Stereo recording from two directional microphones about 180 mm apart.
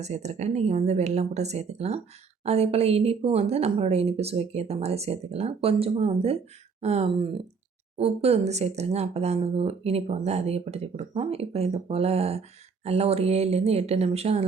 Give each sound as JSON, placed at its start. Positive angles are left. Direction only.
{"t": 0.0, "sound": "speech", "side_deg": -40}